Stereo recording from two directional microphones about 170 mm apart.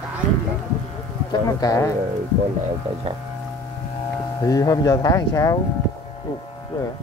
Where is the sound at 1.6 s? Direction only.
20° left (ahead or behind).